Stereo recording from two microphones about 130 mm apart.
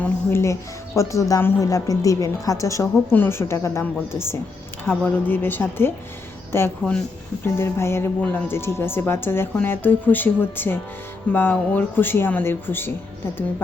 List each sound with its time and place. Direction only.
0.0 s a woman's voice: 20° left (ahead or behind)